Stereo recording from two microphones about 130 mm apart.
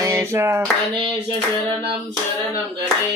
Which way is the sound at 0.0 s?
20° right (ahead or behind).